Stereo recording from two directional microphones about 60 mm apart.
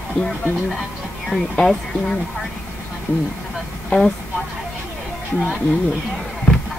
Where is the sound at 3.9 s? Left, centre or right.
Left.